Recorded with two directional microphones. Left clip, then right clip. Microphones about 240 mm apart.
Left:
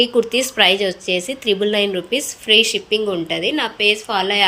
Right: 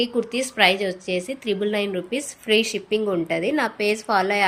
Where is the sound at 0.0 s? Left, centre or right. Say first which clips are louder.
Left 7 dB; centre.